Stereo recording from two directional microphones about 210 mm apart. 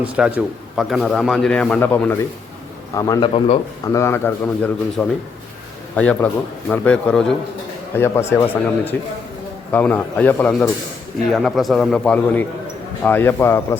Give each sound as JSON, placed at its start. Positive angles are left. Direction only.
{"t": 0.0, "sound": "a man's voice", "side_deg": -5}
{"t": 3.3, "sound": "speech", "side_deg": 25}
{"t": 3.9, "sound": "a man's voice", "side_deg": 10}